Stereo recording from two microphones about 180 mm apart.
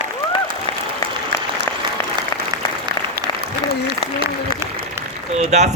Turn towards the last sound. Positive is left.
turn(degrees=-40)  # may be behind; listen again after turning